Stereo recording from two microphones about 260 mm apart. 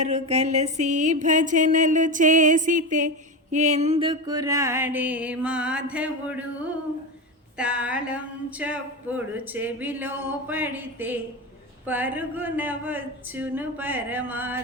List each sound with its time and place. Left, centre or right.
0.0 s a sound: right
3.5 s speech: right; by 6.4 s centre
7.6 s speech: centre